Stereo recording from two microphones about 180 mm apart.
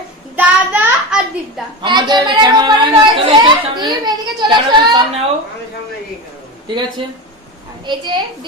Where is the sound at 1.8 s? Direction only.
25° right (ahead or behind).